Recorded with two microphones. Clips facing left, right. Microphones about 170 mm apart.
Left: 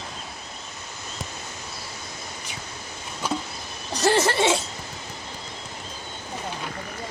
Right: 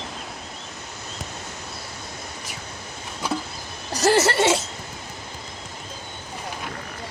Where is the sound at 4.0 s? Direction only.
5° right (ahead or behind).